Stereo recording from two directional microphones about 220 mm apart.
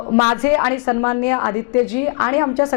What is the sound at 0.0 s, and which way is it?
A woman's voice, 20° left (ahead or behind).